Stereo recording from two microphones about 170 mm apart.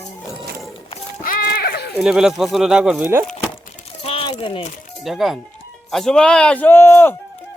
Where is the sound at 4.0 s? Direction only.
35° left (ahead or behind).